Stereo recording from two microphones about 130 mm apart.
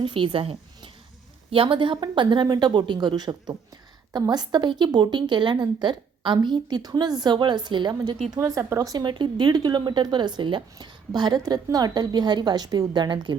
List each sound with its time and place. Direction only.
0.0 s speech: 40° right (ahead or behind)